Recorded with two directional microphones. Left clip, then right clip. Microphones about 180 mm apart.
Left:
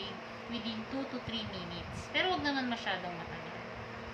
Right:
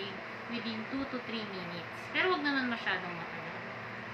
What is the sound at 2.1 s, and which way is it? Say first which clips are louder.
Speech: right 2 dB; 30° left (ahead or behind).